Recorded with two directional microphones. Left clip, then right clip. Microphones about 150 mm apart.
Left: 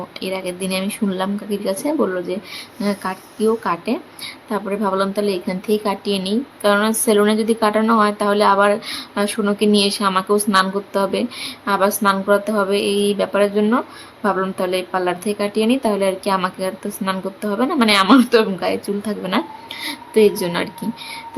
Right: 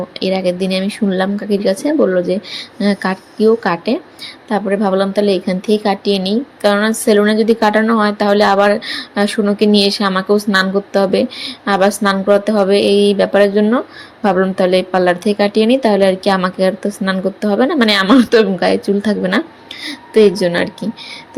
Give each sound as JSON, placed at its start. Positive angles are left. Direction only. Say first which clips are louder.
{"t": 0.2, "sound": "speech", "louder": "right 9 dB", "side_deg": -15}